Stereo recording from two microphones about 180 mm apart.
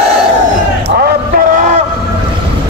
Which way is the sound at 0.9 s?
60° right (ahead or behind).